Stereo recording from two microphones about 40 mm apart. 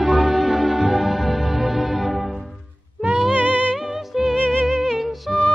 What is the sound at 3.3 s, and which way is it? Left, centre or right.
Music, right.